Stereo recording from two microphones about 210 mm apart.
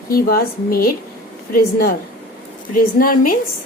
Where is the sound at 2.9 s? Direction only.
40° left (ahead or behind).